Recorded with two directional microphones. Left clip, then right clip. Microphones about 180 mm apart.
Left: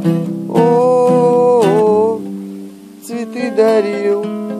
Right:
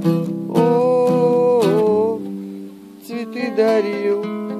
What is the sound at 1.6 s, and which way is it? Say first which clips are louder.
Music: left 4 dB; 30° right (ahead or behind).